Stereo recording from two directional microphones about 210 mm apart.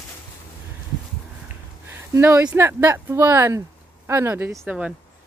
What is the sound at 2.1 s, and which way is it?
Speech, 10° right (ahead or behind).